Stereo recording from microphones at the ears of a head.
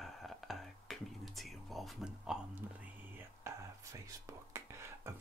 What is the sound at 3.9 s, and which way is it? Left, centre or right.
Speech, right.